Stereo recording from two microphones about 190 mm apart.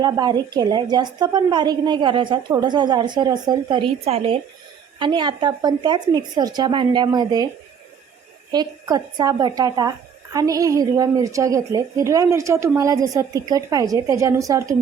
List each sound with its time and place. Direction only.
0.0 s a woman's voice: 20° right (ahead or behind)
8.5 s a woman's voice: 20° right (ahead or behind)